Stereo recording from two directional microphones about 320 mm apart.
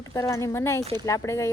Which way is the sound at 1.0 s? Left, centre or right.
Centre.